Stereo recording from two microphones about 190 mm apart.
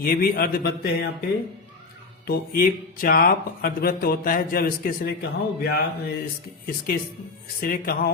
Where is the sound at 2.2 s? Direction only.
50° left (ahead or behind).